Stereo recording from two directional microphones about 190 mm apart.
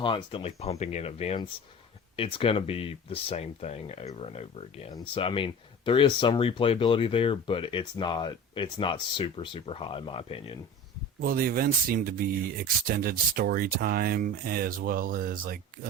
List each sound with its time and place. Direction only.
0.0 s speech: 25° left (ahead or behind)
11.2 s speech: 50° right (ahead or behind)